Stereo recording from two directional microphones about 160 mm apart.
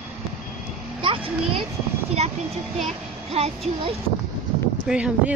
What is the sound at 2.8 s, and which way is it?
Speech, 40° right (ahead or behind).